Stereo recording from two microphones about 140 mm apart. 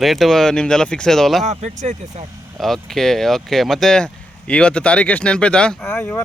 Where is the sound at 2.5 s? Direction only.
Centre (ahead or behind).